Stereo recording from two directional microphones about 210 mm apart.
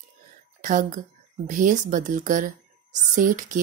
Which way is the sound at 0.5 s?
40° right (ahead or behind).